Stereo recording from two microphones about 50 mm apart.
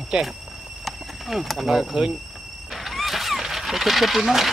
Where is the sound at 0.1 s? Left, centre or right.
Centre.